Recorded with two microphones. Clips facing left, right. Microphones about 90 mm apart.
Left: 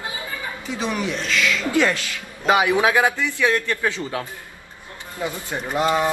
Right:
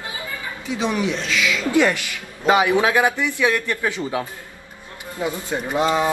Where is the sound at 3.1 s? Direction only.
20° right (ahead or behind).